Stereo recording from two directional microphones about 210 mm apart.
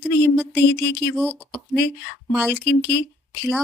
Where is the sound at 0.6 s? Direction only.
55° left (ahead or behind).